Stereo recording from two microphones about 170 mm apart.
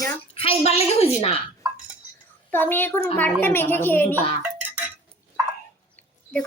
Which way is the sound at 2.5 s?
10° left (ahead or behind).